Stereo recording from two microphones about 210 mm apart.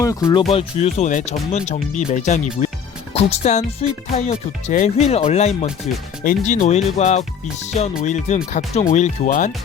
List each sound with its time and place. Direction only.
0.0 s speech: 15° left (ahead or behind)
0.4 s speech: 30° left (ahead or behind)